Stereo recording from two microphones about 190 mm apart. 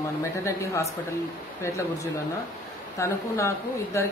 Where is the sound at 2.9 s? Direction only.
15° left (ahead or behind).